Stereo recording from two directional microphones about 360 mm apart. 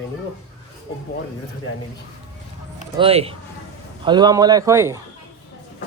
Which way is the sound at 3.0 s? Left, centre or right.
Centre.